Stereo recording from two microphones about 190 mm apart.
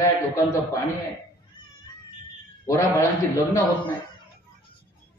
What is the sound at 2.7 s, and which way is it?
Speech, 15° left (ahead or behind).